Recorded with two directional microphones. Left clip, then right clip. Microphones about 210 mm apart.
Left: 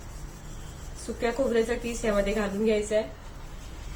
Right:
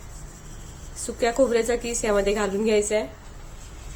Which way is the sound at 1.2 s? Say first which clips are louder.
Right 5 dB; 60° right (ahead or behind).